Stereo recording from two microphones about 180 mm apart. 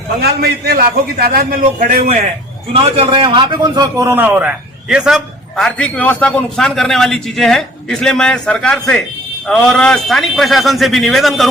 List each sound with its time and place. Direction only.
0.2 s a man's voice: 60° right (ahead or behind); by 2.3 s 45° right (ahead or behind)
2.7 s a man's voice: 30° right (ahead or behind); by 11.4 s centre (ahead or behind)